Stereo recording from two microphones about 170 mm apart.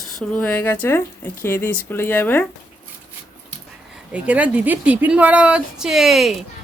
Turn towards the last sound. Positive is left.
turn(degrees=0)  # may be behind; listen again after turning